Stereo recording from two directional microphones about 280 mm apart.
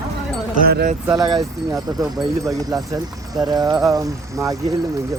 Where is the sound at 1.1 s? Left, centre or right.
Centre.